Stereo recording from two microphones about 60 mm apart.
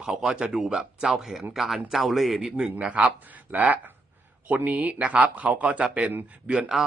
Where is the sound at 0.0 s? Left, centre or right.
Centre.